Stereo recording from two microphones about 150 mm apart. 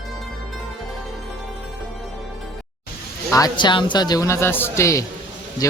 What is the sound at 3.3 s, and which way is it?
Speech, 25° left (ahead or behind).